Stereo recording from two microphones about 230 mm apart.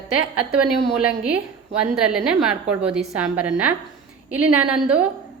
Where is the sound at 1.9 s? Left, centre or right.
Centre.